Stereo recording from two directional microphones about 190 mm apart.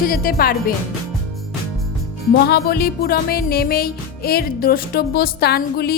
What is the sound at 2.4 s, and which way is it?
Music, 55° left (ahead or behind).